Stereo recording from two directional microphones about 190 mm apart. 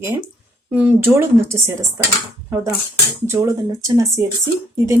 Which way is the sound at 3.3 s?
15° right (ahead or behind).